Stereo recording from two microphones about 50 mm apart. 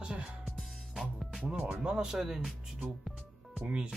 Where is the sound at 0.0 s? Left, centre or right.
Right.